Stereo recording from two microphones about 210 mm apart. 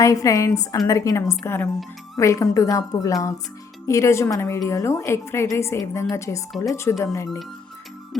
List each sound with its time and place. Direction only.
0.0 s a woman's voice: 15° left (ahead or behind)